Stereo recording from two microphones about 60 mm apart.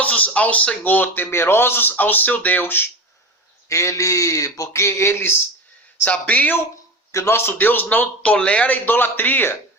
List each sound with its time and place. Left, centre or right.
0.0 s speech: left
0.9 s speech: left
3.7 s speech: left
6.1 s a man's voice: left
7.1 s speech: left